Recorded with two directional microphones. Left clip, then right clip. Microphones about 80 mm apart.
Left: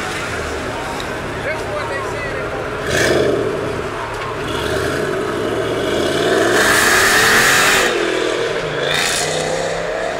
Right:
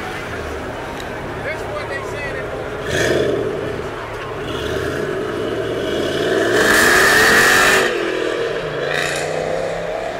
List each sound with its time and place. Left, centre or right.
2.9 s vehicle: centre
5.8 s vehicle: centre